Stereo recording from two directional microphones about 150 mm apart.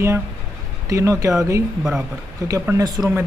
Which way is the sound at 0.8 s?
20° right (ahead or behind).